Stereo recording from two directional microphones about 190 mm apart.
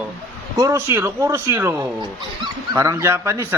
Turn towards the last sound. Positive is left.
turn(degrees=-15)  # may be behind; listen again after turning